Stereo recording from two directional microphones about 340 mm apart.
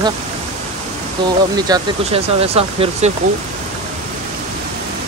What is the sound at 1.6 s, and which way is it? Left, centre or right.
Speech, centre.